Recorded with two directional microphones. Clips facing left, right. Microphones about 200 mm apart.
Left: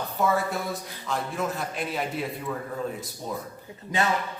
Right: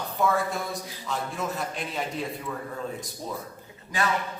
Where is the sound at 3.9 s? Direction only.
25° left (ahead or behind).